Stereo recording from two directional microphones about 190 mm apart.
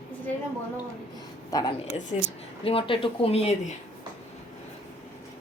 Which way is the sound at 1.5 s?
20° left (ahead or behind).